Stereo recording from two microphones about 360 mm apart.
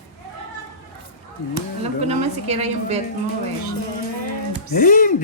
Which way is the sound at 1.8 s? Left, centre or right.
Centre.